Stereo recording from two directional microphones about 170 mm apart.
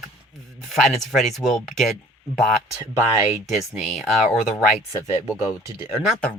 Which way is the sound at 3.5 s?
Centre (ahead or behind).